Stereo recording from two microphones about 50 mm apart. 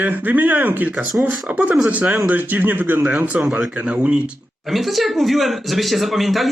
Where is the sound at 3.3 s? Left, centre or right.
Right.